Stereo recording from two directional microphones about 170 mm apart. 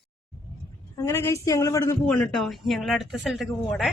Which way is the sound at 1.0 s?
15° left (ahead or behind).